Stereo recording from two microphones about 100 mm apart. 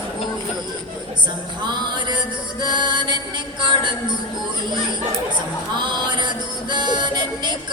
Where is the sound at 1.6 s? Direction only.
50° right (ahead or behind).